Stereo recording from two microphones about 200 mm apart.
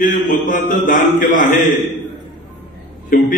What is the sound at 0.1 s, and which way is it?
Mantra, 40° left (ahead or behind).